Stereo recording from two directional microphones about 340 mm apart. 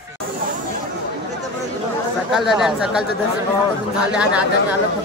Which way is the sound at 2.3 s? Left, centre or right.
Centre.